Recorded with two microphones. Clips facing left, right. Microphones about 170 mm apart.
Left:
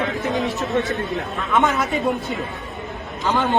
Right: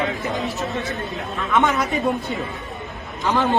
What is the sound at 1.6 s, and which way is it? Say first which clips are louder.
Speech: even; centre (ahead or behind).